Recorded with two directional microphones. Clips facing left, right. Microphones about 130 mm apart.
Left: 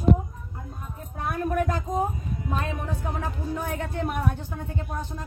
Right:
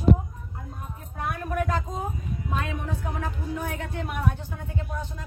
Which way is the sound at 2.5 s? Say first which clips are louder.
Even; 35° left (ahead or behind).